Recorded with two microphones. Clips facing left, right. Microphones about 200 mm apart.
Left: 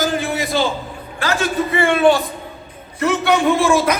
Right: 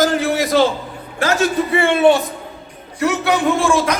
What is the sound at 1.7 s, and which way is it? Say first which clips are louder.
Speech: even; 25° right (ahead or behind).